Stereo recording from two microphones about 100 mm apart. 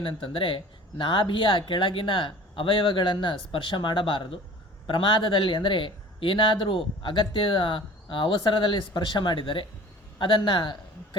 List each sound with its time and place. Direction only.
0.0 s a man's voice: 60° left (ahead or behind)